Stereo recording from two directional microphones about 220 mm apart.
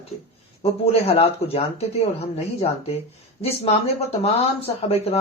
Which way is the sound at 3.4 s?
25° left (ahead or behind).